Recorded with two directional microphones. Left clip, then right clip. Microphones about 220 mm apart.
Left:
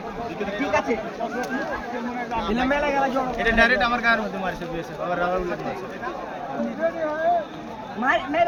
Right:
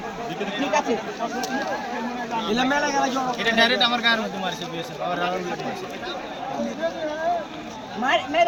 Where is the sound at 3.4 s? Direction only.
Centre (ahead or behind).